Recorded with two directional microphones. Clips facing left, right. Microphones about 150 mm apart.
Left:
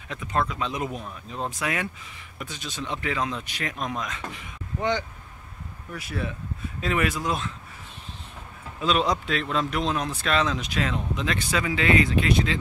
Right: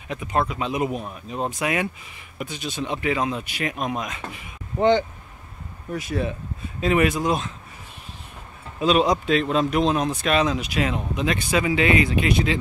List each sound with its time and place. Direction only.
0.1 s speech: 15° right (ahead or behind)
4.7 s speech: 30° right (ahead or behind)
8.7 s speech: 15° right (ahead or behind)